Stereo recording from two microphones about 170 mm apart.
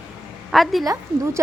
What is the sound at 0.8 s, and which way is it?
Speech, 20° right (ahead or behind).